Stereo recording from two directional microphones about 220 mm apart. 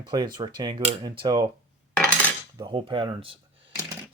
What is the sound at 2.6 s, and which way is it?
Speech, 20° right (ahead or behind).